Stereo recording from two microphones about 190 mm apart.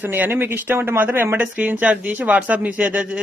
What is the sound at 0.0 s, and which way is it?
Speech, 10° right (ahead or behind).